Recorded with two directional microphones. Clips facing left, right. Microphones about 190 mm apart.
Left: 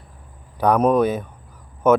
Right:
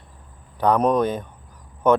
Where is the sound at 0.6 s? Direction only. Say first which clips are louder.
Left 2 dB; 5° left (ahead or behind).